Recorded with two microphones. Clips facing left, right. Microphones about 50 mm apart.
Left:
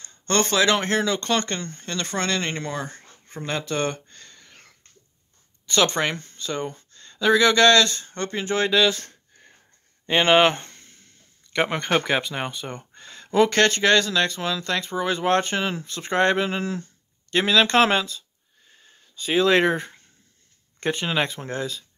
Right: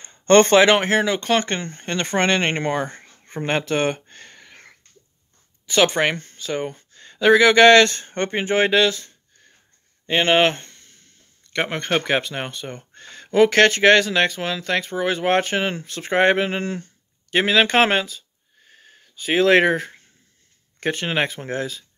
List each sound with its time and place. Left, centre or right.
0.0 s a sound: right
0.8 s speech: centre; by 3.6 s right
3.6 s speech: right
4.1 s a sound: right
5.7 s speech: centre
5.9 s speech: centre
7.8 s speech: right
10.2 s speech: right
10.5 s a sound: left
11.5 s speech: centre
13.7 s speech: right; by 18.0 s centre
19.2 s speech: centre